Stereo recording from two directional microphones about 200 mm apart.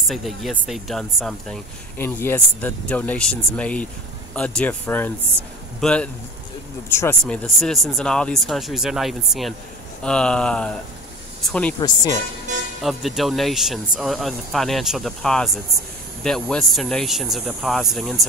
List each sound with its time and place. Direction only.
0.1 s speech: centre (ahead or behind)
11.8 s speech: 20° left (ahead or behind)
12.8 s speech: centre (ahead or behind)